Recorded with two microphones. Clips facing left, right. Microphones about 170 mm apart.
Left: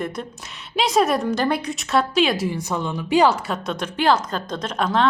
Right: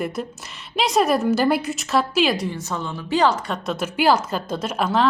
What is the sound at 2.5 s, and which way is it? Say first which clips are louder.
A woman's voice: left 3 dB; 15° left (ahead or behind).